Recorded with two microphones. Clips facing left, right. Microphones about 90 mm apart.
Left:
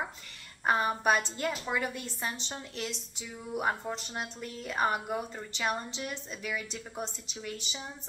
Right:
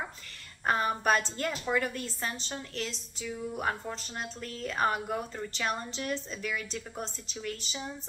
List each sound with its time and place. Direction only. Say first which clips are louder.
0.7 s a woman's voice: even; 10° left (ahead or behind)